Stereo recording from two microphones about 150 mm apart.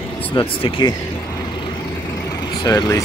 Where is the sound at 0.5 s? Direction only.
35° left (ahead or behind).